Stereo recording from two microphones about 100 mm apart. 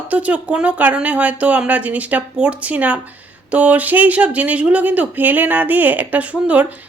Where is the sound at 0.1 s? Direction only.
15° right (ahead or behind).